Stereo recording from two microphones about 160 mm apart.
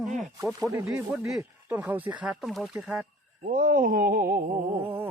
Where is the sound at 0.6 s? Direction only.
20° right (ahead or behind).